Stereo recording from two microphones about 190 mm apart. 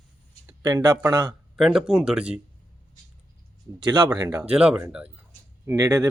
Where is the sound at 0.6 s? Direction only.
20° right (ahead or behind).